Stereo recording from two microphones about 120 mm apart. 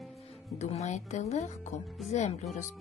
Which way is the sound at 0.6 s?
65° left (ahead or behind).